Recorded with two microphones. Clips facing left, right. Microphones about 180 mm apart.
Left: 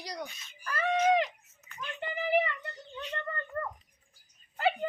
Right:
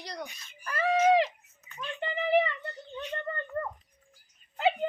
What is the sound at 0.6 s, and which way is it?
Screaming, 30° right (ahead or behind).